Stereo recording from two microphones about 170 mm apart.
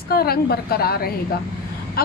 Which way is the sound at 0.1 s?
65° left (ahead or behind).